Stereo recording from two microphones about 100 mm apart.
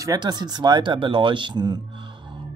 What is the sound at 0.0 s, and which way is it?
Speech, 40° right (ahead or behind).